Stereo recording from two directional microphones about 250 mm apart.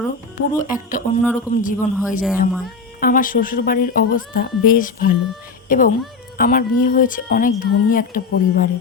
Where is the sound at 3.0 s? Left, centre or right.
Left.